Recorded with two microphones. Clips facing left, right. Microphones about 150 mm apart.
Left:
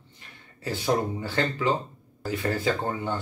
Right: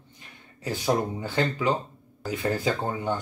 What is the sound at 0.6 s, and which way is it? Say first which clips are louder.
Speech: even; 15° right (ahead or behind).